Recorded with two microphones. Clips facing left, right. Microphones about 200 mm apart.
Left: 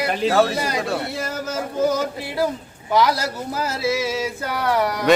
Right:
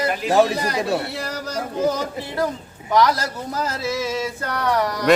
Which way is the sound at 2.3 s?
10° left (ahead or behind).